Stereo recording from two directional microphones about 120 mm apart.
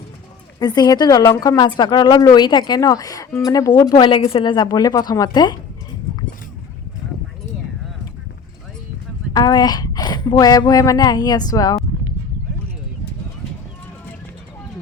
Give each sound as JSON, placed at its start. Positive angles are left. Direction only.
{"t": 0.6, "sound": "a woman's voice", "side_deg": 35}
{"t": 3.9, "sound": "a woman's voice", "side_deg": 45}
{"t": 4.5, "sound": "a woman's voice", "side_deg": 35}
{"t": 9.3, "sound": "a woman's voice", "side_deg": 35}